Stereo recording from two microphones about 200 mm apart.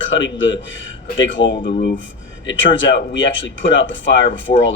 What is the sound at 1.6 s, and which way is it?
Speech, 45° left (ahead or behind).